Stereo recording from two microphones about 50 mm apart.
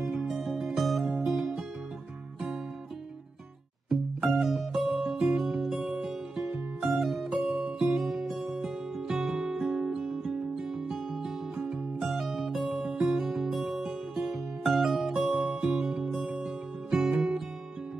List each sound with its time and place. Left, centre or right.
0.0 s music: centre
3.9 s music: centre
16.4 s music: centre